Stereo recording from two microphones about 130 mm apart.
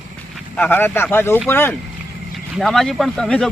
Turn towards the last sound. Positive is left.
turn(degrees=5)  # may be behind; listen again after turning